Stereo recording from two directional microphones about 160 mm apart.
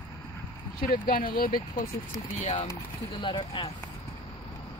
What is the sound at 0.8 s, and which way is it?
Speech, 60° left (ahead or behind).